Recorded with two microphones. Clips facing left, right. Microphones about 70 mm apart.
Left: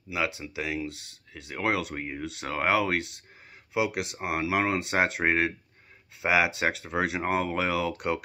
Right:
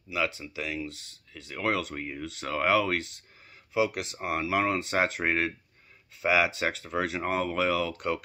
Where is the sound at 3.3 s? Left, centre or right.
Left.